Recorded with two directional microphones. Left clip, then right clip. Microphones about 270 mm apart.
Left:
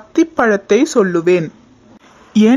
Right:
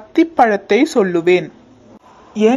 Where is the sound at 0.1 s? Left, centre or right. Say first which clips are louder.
Right 1 dB; centre.